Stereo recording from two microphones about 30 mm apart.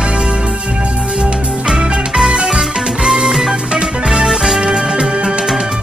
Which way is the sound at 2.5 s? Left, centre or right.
Centre.